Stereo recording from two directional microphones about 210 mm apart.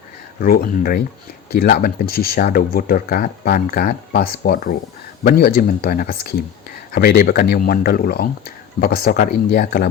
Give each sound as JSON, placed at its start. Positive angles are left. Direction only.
{"t": 0.3, "sound": "speech", "side_deg": 45}